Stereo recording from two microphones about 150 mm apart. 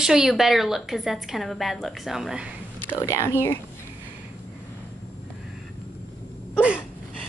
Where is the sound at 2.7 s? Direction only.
15° left (ahead or behind).